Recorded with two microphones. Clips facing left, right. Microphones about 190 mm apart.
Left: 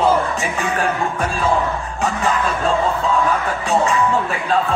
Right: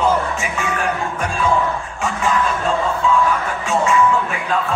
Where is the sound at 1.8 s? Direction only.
35° left (ahead or behind).